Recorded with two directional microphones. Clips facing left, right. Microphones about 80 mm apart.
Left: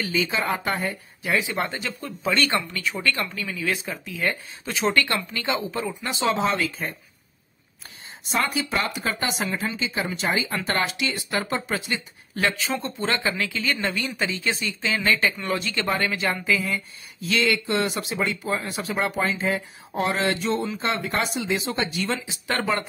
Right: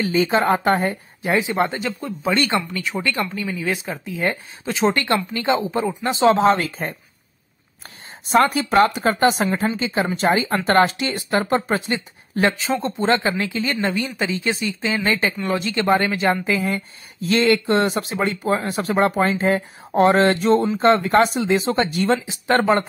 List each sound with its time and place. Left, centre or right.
0.0 s speech: right
1.2 s speech: right
8.3 s speech: right